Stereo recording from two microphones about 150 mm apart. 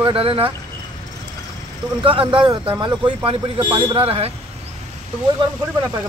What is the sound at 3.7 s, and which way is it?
Speech, 35° right (ahead or behind).